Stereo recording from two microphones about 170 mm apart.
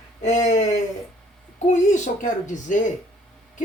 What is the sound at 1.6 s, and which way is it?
Speech, 45° left (ahead or behind).